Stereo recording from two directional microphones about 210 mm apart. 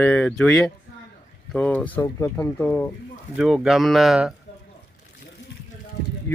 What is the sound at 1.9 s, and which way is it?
Speech, 20° left (ahead or behind).